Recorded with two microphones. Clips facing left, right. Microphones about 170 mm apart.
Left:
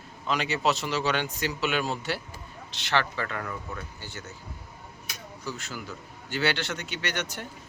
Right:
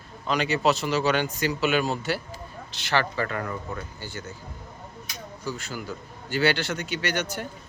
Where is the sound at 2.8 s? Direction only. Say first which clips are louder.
Right 2 dB; 5° right (ahead or behind).